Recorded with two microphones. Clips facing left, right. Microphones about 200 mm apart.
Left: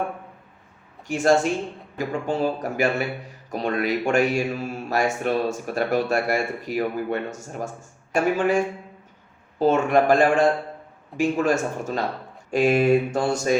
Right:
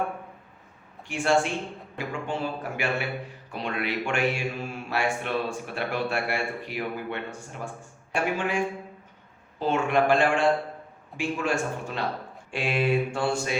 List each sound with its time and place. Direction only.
1.0 s speech: 40° left (ahead or behind)